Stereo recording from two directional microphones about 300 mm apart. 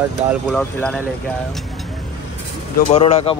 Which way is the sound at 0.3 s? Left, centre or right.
Centre.